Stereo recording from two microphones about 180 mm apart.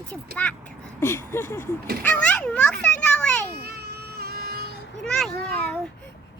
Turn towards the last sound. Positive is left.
turn(degrees=5)  # may be behind; listen again after turning